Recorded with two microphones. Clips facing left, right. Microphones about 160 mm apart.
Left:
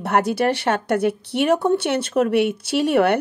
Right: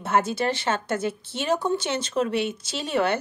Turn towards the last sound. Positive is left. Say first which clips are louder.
# left 7 dB
turn(degrees=65)  # may be behind; listen again after turning